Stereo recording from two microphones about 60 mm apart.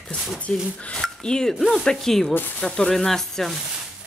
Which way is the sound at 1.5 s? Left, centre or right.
Centre.